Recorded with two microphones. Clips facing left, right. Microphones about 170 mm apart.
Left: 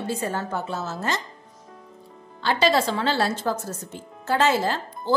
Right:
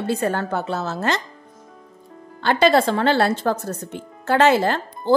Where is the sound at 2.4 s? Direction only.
55° right (ahead or behind).